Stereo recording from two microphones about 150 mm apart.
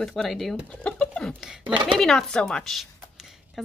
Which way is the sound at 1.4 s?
5° right (ahead or behind).